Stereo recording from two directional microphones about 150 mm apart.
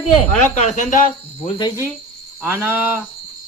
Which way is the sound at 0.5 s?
55° left (ahead or behind).